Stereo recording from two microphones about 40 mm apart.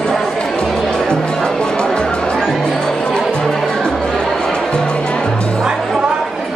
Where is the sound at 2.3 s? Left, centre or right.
Centre.